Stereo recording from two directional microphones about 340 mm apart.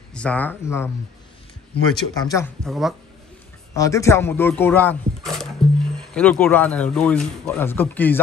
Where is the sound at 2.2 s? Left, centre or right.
Centre.